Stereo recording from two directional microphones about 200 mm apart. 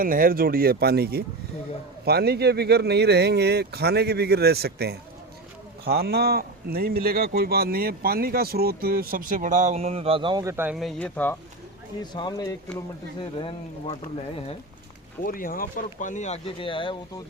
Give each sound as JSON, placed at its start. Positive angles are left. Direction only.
{"t": 0.0, "sound": "speech", "side_deg": -45}
{"t": 10.8, "sound": "speech", "side_deg": 0}
{"t": 12.1, "sound": "speech", "side_deg": 20}
{"t": 15.2, "sound": "speech", "side_deg": 45}